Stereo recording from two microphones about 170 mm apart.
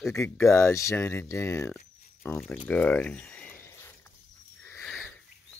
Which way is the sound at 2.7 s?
5° left (ahead or behind).